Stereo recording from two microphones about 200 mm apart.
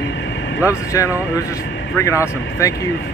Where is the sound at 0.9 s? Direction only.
15° left (ahead or behind).